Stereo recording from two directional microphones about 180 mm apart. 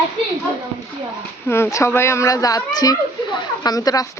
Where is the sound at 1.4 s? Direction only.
15° left (ahead or behind).